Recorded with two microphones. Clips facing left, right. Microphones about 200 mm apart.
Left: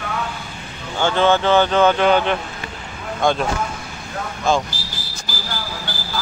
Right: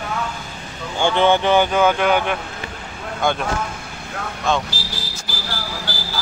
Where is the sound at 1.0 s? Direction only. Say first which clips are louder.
Even; 15° right (ahead or behind).